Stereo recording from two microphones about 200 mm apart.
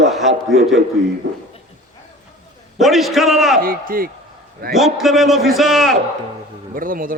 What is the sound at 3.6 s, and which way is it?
Speech, 45° right (ahead or behind).